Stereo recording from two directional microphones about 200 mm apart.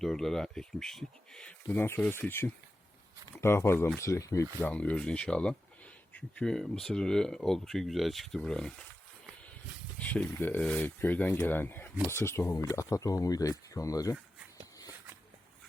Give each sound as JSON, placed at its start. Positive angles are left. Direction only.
{"t": 0.0, "sound": "speech", "side_deg": 0}
{"t": 10.0, "sound": "speech", "side_deg": 5}